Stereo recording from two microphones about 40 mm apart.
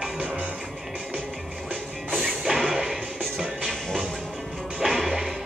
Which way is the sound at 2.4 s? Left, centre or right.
Centre.